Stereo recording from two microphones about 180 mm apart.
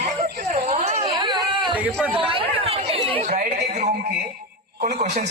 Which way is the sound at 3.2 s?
45° right (ahead or behind).